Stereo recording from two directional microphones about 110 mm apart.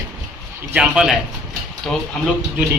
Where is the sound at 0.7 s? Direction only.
5° right (ahead or behind).